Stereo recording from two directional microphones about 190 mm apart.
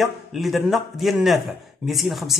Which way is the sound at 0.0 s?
Centre (ahead or behind).